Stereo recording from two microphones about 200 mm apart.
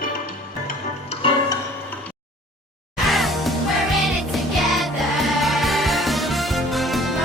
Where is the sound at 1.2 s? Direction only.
25° left (ahead or behind).